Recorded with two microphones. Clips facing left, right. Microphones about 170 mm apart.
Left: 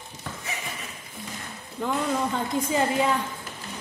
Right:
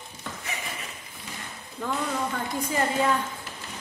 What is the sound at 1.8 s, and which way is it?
A woman's voice, 15° left (ahead or behind).